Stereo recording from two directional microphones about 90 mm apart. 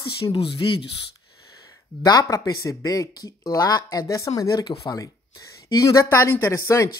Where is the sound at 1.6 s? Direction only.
40° left (ahead or behind).